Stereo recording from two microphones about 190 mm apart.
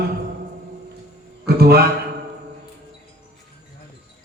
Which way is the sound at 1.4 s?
55° right (ahead or behind).